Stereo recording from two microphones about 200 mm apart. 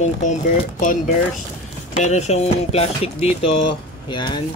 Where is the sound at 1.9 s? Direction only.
35° left (ahead or behind).